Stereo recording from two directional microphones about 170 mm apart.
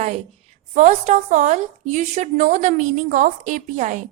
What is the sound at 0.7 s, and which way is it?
A woman's voice, 45° right (ahead or behind).